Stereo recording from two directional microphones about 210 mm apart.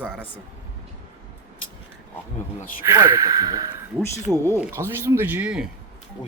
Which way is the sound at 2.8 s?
15° right (ahead or behind).